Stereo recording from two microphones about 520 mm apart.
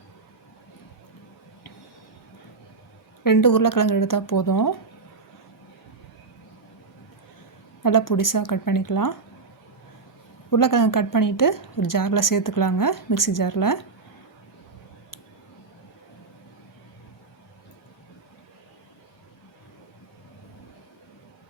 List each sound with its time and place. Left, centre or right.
3.2 s a woman's voice: left
7.8 s a woman's voice: left
10.5 s a woman's voice: left